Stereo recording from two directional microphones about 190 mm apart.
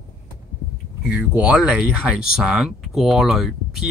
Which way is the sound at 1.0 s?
5° right (ahead or behind).